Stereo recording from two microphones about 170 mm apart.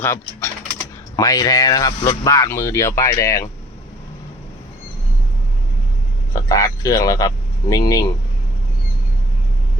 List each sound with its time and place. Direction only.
0.0 s typing: 15° left (ahead or behind)
1.1 s speech: 20° left (ahead or behind)
6.3 s speech: 20° left (ahead or behind)